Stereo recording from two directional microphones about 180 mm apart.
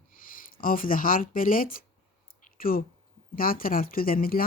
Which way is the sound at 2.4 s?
50° left (ahead or behind).